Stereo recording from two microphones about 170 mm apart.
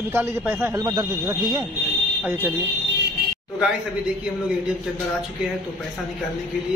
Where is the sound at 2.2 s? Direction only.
10° right (ahead or behind).